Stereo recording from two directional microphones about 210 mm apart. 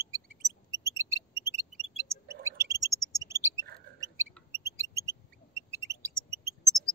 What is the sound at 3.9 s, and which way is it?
Mouse, 15° right (ahead or behind).